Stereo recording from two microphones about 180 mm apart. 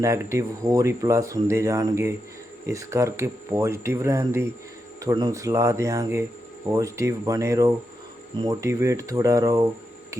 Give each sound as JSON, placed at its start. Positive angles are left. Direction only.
{"t": 0.0, "sound": "speech", "side_deg": -15}